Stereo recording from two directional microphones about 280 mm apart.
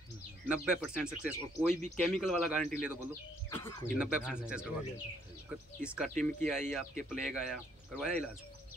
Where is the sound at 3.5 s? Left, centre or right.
Centre.